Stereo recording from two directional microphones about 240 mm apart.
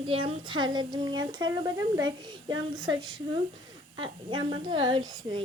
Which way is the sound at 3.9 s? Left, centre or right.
Centre.